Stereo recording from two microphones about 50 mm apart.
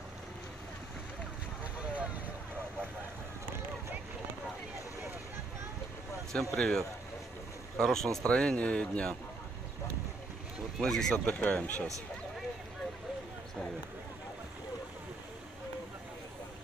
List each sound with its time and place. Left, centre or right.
1.6 s boat: right
6.5 s speech: centre
8.3 s speech: centre
10.8 s speech: centre
11.2 s speech: left